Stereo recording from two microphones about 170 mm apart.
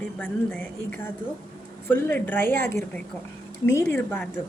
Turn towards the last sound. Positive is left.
turn(degrees=10)  # may be behind; listen again after turning